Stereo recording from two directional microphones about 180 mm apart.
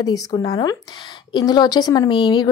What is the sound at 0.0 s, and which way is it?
Speech, 20° left (ahead or behind).